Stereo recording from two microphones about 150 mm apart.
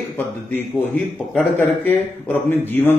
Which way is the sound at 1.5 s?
10° left (ahead or behind).